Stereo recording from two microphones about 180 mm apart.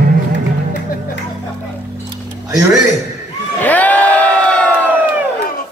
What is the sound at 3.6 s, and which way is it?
Crowd, 10° left (ahead or behind).